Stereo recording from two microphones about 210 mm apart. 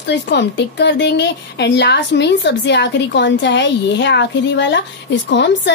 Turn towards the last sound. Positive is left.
turn(degrees=55)  # may be behind; listen again after turning